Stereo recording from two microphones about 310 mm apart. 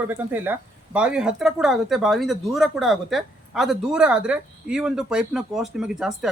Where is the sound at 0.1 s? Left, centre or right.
Centre.